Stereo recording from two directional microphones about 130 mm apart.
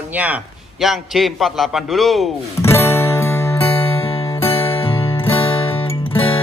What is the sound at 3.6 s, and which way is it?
Music, 45° left (ahead or behind).